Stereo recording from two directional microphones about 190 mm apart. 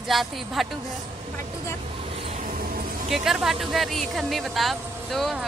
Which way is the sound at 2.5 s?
50° right (ahead or behind).